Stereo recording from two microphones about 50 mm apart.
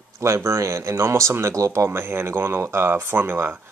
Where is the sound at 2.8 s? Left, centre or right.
Right.